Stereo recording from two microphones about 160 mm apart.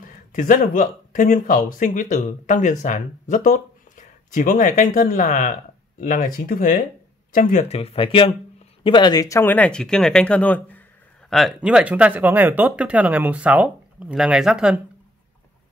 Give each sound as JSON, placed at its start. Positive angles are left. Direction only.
{"t": 0.3, "sound": "speech", "side_deg": 60}
{"t": 7.6, "sound": "speech", "side_deg": 40}